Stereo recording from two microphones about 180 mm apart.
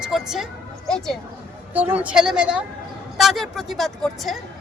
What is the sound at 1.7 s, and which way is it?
A woman's voice, 10° right (ahead or behind).